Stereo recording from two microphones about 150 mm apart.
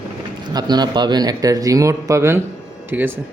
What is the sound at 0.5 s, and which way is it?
A man's voice, 30° right (ahead or behind).